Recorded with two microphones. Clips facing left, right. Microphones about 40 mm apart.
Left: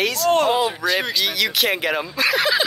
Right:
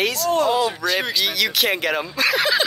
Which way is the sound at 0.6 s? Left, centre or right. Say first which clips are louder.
Even; centre.